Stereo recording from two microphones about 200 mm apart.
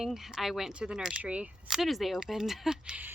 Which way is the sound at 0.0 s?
Centre (ahead or behind).